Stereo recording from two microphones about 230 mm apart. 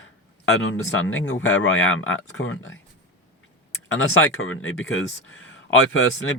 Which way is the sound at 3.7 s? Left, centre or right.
Left.